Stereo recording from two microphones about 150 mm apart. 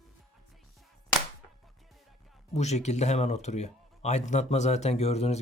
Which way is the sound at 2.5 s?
50° left (ahead or behind).